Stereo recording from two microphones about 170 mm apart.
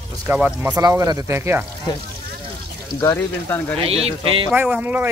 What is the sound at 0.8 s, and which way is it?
Speech, 20° right (ahead or behind).